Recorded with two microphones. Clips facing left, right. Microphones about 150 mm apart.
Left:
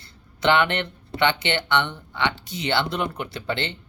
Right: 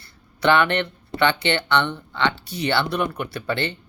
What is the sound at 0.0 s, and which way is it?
Speech, 20° left (ahead or behind).